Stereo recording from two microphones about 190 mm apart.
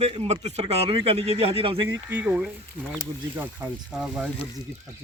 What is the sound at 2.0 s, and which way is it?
Speech, 10° right (ahead or behind).